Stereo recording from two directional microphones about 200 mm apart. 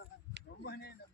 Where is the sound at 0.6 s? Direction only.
55° left (ahead or behind).